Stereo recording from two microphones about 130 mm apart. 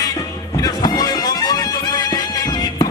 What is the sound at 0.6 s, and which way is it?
Music, 30° left (ahead or behind).